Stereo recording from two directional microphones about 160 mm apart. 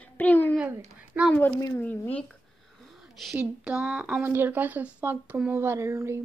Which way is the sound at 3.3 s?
5° right (ahead or behind).